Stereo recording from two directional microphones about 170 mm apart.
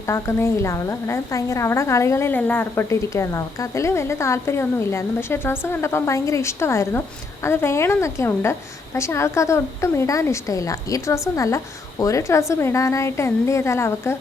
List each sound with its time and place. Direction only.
0.1 s a woman's voice: 15° left (ahead or behind)